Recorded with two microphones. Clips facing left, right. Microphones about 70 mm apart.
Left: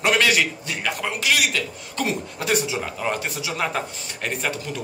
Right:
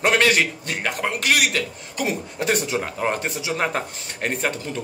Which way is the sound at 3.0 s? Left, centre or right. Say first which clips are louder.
Right 2 dB; right.